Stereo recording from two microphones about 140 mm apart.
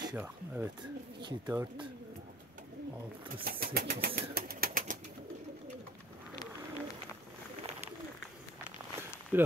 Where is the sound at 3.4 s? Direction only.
90° right.